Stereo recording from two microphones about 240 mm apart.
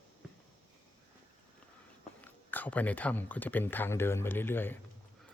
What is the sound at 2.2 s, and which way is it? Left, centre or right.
Speech, centre.